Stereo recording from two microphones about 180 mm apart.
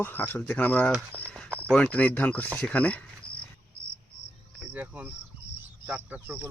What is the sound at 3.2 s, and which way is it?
Cricket, 60° left (ahead or behind).